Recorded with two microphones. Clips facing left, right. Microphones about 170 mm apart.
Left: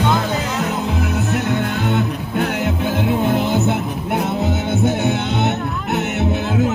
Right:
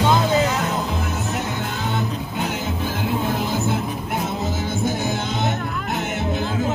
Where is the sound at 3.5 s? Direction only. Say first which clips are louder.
Left 4 dB; 65° left (ahead or behind).